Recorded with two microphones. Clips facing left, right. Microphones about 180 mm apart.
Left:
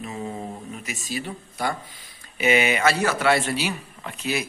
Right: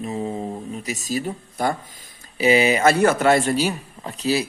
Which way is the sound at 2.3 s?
35° right (ahead or behind).